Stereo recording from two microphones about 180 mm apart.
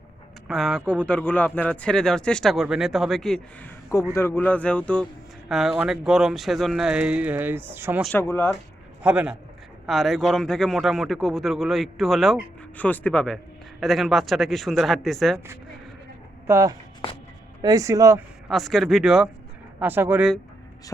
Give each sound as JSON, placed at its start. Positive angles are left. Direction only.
{"t": 0.4, "sound": "a man's voice", "side_deg": 0}
{"t": 4.1, "sound": "a man's voice", "side_deg": 15}
{"t": 8.0, "sound": "speech", "side_deg": 10}
{"t": 9.0, "sound": "a man's voice", "side_deg": -5}
{"t": 16.5, "sound": "speech", "side_deg": -15}
{"t": 18.4, "sound": "a man's voice", "side_deg": 0}